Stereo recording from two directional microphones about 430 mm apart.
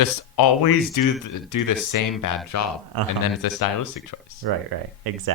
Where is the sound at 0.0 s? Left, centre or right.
Left.